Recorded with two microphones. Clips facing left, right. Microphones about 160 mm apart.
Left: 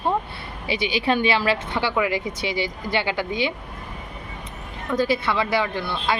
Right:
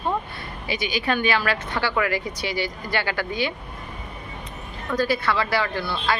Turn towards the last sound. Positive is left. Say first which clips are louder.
# even
turn(degrees=20)  # may be behind; listen again after turning